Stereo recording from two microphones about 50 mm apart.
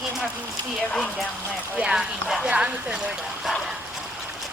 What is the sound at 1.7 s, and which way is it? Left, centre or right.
Speech, centre.